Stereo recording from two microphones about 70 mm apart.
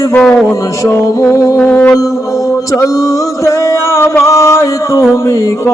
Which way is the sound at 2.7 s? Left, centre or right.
Left.